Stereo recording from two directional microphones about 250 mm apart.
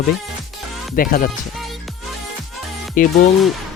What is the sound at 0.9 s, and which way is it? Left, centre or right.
Speech, left.